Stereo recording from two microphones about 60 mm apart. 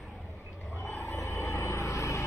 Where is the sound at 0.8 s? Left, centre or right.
Left.